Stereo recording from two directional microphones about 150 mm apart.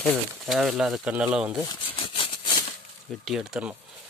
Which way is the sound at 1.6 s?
35° left (ahead or behind).